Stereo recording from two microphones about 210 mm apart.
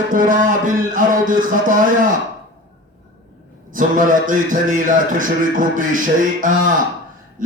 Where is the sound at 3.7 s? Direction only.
40° right (ahead or behind).